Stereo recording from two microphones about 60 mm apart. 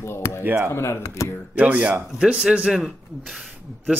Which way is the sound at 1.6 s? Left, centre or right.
Right.